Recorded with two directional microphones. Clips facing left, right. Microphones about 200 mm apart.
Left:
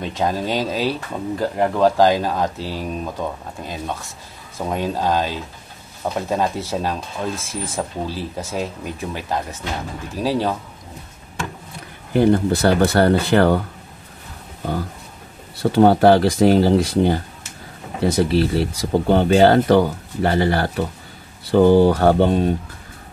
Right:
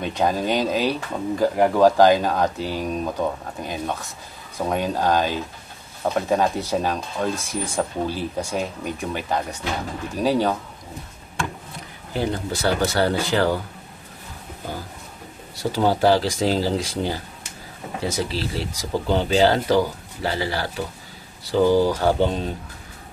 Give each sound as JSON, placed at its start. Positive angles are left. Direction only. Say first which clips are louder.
{"t": 0.0, "sound": "speech", "louder": "even", "side_deg": 0}
{"t": 12.1, "sound": "speech", "louder": "left 10 dB", "side_deg": 55}
{"t": 15.5, "sound": "speech", "louder": "left 7 dB", "side_deg": 60}